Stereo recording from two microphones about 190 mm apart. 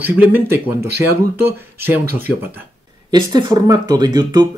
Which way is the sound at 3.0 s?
20° right (ahead or behind).